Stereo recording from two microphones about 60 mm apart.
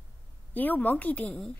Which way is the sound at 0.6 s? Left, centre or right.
Left.